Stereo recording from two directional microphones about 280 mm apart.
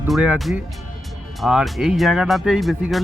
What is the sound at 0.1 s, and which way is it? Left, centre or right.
Speech, centre.